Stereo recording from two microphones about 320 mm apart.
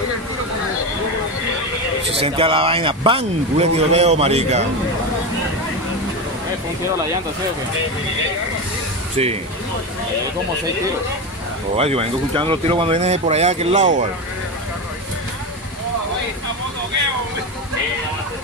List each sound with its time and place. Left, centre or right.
2.1 s a man's voice: centre
11.7 s speech: centre